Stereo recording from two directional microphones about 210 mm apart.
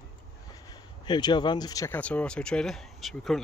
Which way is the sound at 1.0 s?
20° left (ahead or behind).